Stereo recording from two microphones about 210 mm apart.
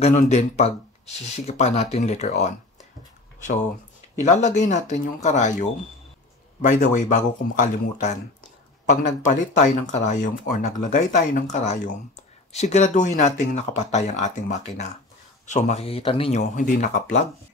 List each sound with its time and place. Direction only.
0.0 s speech: 30° left (ahead or behind)
4.2 s speech: 35° left (ahead or behind)